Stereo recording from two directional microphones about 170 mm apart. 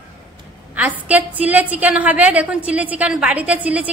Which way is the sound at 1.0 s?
10° right (ahead or behind).